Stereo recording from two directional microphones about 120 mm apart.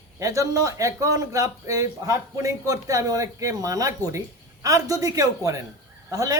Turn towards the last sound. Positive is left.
turn(degrees=-30)  # may be behind; listen again after turning